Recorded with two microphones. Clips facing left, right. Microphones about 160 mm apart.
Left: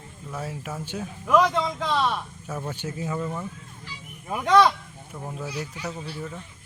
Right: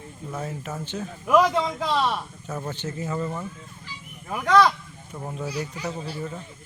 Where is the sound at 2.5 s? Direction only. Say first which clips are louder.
Right 1 dB; 10° left (ahead or behind).